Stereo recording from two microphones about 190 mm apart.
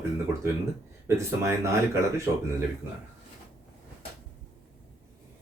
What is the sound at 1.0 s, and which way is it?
Speech, 15° right (ahead or behind).